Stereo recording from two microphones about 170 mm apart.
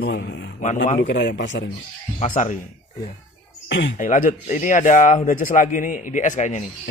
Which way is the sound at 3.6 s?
90° left.